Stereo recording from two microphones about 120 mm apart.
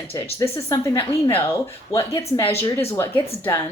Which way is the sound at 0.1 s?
25° left (ahead or behind).